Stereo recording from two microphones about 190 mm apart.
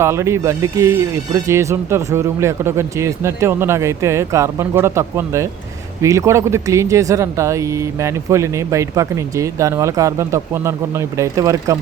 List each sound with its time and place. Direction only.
0.0 s speech: 15° right (ahead or behind)